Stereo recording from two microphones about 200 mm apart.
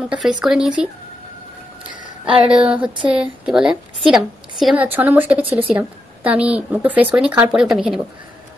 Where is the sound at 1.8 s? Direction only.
40° left (ahead or behind).